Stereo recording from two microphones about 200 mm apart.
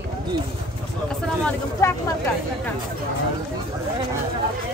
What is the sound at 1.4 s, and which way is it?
Speech, 10° left (ahead or behind).